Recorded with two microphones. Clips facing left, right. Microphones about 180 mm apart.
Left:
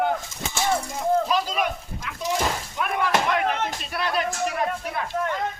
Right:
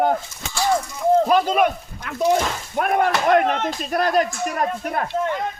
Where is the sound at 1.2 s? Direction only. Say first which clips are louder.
Right 7 dB; 55° right (ahead or behind).